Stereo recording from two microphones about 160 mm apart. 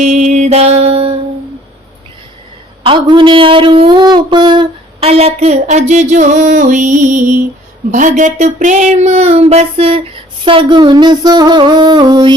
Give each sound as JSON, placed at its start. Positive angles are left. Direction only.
{"t": 0.0, "sound": "speech", "side_deg": -50}
{"t": 2.8, "sound": "speech", "side_deg": -30}
{"t": 10.4, "sound": "a sound", "side_deg": -30}